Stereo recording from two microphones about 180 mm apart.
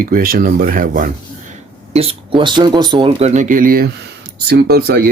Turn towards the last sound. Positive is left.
turn(degrees=-60)  # may be behind; listen again after turning